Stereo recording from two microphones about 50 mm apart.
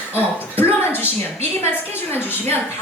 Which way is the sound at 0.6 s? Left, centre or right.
Left.